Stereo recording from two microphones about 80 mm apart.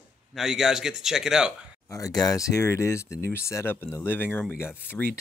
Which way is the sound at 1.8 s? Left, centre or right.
Left.